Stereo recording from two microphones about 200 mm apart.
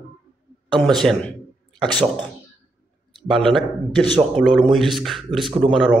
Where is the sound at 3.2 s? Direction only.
Centre (ahead or behind).